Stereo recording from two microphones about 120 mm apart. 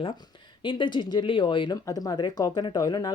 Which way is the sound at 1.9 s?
30° left (ahead or behind).